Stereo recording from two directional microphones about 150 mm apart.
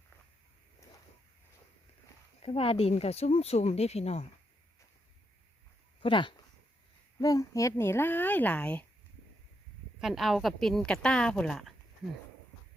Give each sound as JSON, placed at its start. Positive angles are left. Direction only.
{"t": 2.4, "sound": "speech", "side_deg": 40}
{"t": 6.0, "sound": "speech", "side_deg": 35}
{"t": 10.0, "sound": "a woman's voice", "side_deg": 0}